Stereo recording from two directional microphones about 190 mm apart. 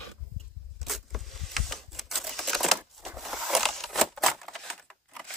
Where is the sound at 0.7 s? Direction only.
Centre (ahead or behind).